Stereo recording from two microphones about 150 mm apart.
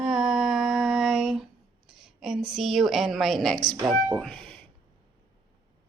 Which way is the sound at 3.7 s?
20° right (ahead or behind).